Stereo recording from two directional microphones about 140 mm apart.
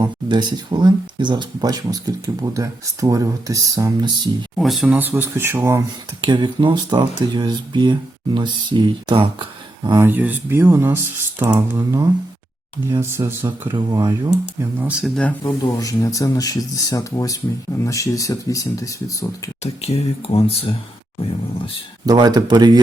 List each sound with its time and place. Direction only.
0.0 s speech: 30° right (ahead or behind)
4.5 s speech: centre (ahead or behind)
4.9 s speech: 15° right (ahead or behind)
6.2 s speech: 35° right (ahead or behind)
9.9 s speech: 15° right (ahead or behind)
13.7 s speech: 30° right (ahead or behind)
14.8 s speech: 10° right (ahead or behind)
15.0 s speech: 5° left (ahead or behind)
15.8 s speech: 25° left (ahead or behind)
19.6 s speech: 45° left (ahead or behind)
22.0 s speech: 30° right (ahead or behind)